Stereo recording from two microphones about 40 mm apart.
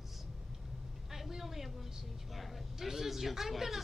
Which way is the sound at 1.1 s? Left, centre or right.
Centre.